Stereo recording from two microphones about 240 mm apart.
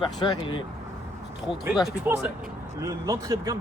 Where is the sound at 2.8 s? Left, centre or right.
Centre.